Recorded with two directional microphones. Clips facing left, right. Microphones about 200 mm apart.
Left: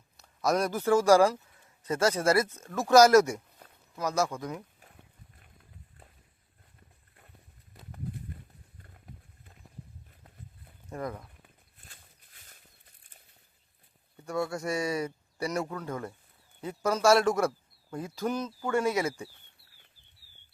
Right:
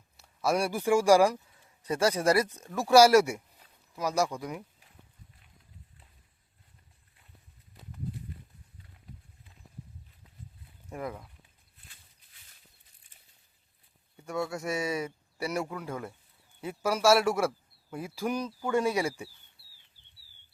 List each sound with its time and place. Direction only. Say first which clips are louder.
0.2 s a man's voice: left 1 dB; 10° right (ahead or behind)
10.8 s speech: left 1 dB; 5° right (ahead or behind)
11.4 s a sound: left 4 dB; 50° left (ahead or behind)
14.4 s speech: even; centre (ahead or behind)